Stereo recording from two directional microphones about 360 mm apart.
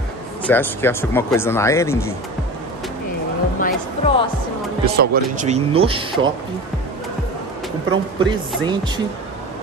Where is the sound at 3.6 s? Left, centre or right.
Centre.